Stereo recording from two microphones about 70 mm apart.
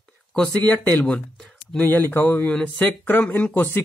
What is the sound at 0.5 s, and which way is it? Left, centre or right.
Speech, left.